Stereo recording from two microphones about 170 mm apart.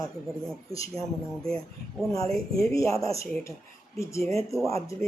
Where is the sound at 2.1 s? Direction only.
20° left (ahead or behind).